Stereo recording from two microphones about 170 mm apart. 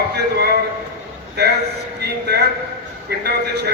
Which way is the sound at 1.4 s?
75° right (ahead or behind).